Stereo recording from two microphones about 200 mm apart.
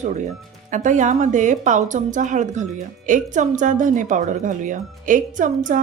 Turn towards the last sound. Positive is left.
turn(degrees=-40)  # may be behind; listen again after turning